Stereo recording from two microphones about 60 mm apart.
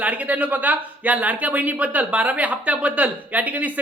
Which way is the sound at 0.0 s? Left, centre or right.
Right.